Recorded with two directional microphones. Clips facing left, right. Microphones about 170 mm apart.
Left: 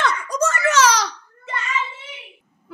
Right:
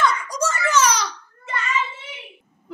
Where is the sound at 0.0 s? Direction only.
60° left (ahead or behind); by 1.0 s 90° left.